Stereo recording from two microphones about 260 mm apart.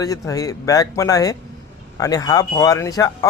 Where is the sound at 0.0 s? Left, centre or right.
Centre.